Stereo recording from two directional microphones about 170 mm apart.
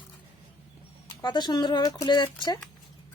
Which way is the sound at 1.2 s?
25° left (ahead or behind).